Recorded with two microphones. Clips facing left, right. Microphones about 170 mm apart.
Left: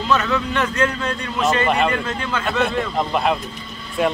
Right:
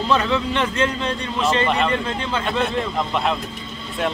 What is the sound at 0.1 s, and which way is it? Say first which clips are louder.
Speech: even; 25° right (ahead or behind).